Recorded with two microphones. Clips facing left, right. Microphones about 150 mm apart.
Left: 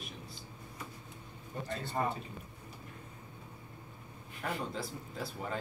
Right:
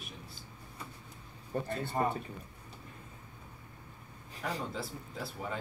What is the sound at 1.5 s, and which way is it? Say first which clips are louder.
Speech: right 7 dB; 60° right (ahead or behind).